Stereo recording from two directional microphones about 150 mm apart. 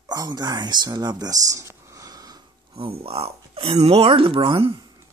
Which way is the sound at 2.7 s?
40° right (ahead or behind).